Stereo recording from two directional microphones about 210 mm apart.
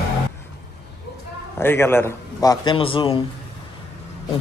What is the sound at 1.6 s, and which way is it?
A man's voice, 10° left (ahead or behind).